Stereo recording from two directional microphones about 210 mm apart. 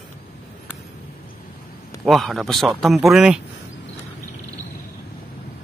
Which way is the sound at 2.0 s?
Centre (ahead or behind).